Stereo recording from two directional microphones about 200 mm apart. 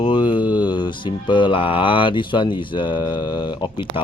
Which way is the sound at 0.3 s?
5° right (ahead or behind).